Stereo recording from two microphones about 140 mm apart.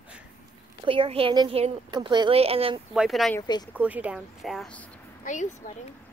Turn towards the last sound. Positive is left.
turn(degrees=60)  # may be behind; listen again after turning